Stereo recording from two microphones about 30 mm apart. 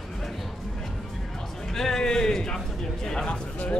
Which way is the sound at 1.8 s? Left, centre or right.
Centre.